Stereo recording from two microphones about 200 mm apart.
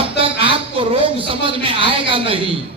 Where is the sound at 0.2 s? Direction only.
25° right (ahead or behind).